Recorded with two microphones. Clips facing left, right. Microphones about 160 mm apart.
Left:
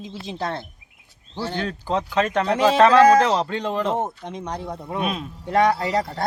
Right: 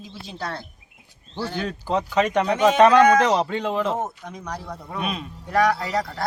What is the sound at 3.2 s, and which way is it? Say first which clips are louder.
Speech: right 1 dB; 10° right (ahead or behind).